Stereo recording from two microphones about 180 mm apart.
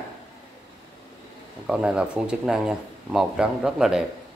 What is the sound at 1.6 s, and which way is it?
Speech, 5° right (ahead or behind).